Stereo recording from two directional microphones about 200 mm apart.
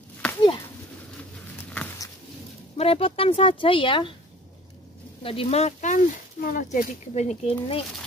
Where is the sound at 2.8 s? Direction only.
30° left (ahead or behind).